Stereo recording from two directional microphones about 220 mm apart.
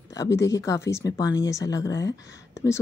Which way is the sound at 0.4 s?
15° left (ahead or behind).